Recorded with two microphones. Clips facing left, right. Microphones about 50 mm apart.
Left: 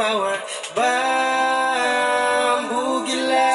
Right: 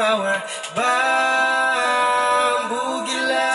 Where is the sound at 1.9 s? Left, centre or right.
Centre.